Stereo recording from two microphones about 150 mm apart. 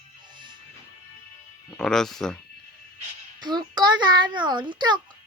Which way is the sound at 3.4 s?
30° right (ahead or behind).